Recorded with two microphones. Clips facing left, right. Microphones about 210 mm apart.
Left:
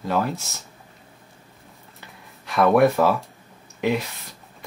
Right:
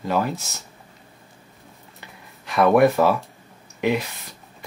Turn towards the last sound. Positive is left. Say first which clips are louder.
# right 1 dB
turn(degrees=0)  # may be behind; listen again after turning